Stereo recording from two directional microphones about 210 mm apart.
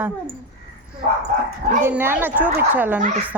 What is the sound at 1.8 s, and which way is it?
Speech, 10° right (ahead or behind).